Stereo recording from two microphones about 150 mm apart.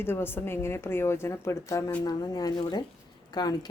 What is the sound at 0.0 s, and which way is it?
Speech, 15° left (ahead or behind).